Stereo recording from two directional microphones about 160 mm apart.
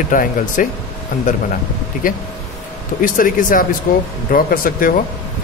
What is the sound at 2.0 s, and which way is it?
A man's voice, 60° left (ahead or behind).